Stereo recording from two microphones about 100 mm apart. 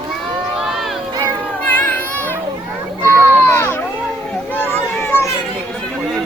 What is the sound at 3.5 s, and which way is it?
Baby cry, 20° left (ahead or behind).